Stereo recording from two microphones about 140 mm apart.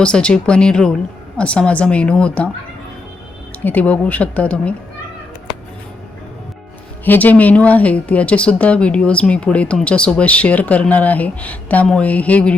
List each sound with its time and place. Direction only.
0.0 s speech: 5° left (ahead or behind)
3.6 s speech: 10° left (ahead or behind)
7.0 s speech: 15° left (ahead or behind)